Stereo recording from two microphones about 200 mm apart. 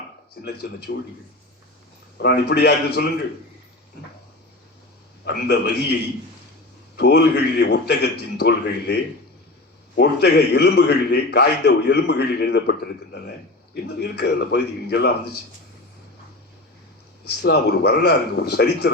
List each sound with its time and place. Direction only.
0.4 s speech: 55° left (ahead or behind)
2.1 s a man's voice: 55° left (ahead or behind)
5.2 s a man's voice: 55° left (ahead or behind)
6.9 s a man's voice: 55° left (ahead or behind)
14.0 s a man's voice: 55° left (ahead or behind)
17.4 s a man's voice: 55° left (ahead or behind)